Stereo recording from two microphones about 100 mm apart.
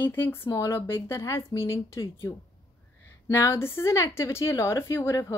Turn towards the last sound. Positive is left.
turn(degrees=30)  # may be behind; listen again after turning